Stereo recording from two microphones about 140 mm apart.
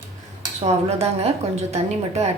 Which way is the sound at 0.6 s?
50° right (ahead or behind).